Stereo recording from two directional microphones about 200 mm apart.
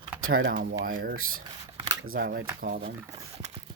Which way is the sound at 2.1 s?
55° right (ahead or behind).